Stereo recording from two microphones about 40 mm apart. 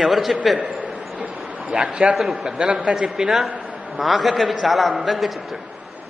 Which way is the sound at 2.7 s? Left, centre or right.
Right.